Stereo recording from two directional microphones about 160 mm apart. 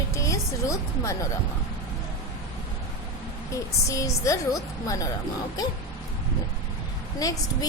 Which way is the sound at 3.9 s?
20° left (ahead or behind).